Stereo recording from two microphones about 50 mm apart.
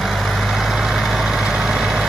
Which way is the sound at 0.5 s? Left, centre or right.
Centre.